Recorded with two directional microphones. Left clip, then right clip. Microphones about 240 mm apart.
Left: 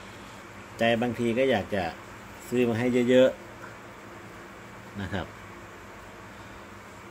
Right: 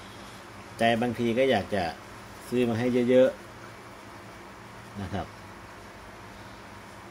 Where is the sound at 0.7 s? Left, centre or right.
Centre.